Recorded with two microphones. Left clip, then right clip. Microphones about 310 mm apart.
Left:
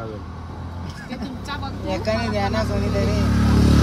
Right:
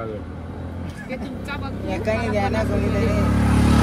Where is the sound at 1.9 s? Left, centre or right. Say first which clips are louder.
Even; left.